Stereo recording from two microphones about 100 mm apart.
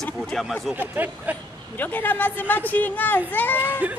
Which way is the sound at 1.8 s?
20° left (ahead or behind).